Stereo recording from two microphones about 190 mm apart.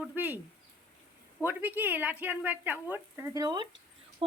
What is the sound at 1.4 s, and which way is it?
Speech, 10° right (ahead or behind).